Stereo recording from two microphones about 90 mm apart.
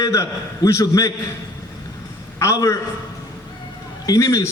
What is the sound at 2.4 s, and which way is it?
Speech, 35° left (ahead or behind).